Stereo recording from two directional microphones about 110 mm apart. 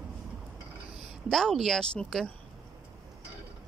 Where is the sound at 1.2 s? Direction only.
5° left (ahead or behind).